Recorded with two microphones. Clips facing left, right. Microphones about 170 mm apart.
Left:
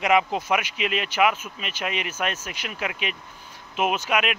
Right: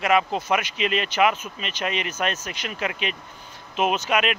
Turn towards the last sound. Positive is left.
turn(degrees=10)  # may be behind; listen again after turning